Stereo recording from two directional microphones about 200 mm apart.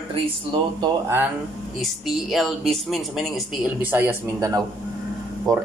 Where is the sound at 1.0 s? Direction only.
10° right (ahead or behind).